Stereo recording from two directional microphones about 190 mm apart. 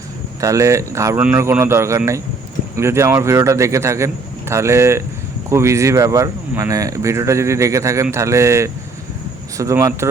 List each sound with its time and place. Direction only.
0.4 s speech: 15° right (ahead or behind)